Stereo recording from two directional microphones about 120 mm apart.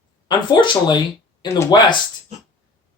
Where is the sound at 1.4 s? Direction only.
25° left (ahead or behind).